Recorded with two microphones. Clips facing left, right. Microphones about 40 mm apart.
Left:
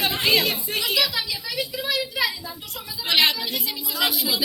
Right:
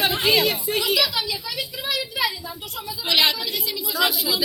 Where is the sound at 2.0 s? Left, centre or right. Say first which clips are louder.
Right 1 dB; centre.